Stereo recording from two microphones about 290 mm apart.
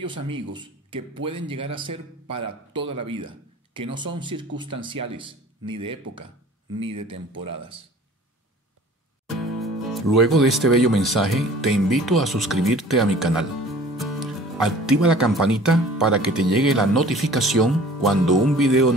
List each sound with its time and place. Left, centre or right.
0.0 s speech: centre
6.8 s speech: centre
9.4 s speech: centre